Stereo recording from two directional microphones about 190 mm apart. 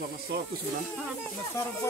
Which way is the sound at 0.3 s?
65° right (ahead or behind).